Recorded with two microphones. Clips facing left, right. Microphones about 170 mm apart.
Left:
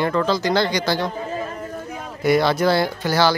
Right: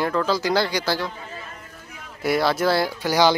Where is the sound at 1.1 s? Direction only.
40° left (ahead or behind).